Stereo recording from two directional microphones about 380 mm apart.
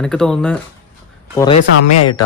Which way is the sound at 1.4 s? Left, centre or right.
Centre.